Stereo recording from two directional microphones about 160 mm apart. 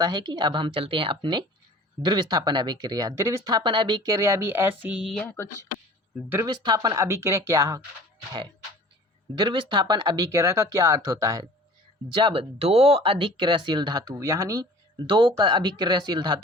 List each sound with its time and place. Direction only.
0.0 s speech: 25° right (ahead or behind); by 5.2 s 5° right (ahead or behind)
5.2 s speech: 10° left (ahead or behind)
6.4 s speech: 25° right (ahead or behind)
9.3 s speech: 30° right (ahead or behind)
12.1 s speech: 30° right (ahead or behind)